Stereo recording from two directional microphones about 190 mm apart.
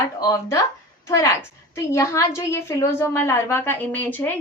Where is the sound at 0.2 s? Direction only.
15° left (ahead or behind).